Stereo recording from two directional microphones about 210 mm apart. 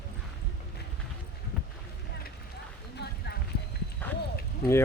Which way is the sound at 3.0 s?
50° left (ahead or behind).